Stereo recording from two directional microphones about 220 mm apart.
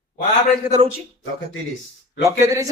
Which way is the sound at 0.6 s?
10° right (ahead or behind).